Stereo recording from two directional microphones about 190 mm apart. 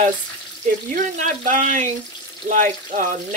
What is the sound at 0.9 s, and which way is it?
Speech, 40° right (ahead or behind).